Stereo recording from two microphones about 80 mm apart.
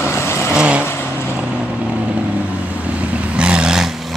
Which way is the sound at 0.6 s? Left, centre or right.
Centre.